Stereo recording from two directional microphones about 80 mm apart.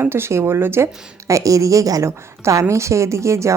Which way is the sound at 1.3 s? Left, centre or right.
Right.